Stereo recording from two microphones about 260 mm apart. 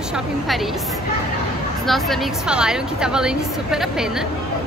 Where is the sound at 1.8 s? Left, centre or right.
Centre.